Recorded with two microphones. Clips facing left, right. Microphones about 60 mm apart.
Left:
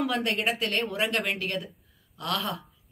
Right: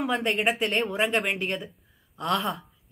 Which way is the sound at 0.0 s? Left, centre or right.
Centre.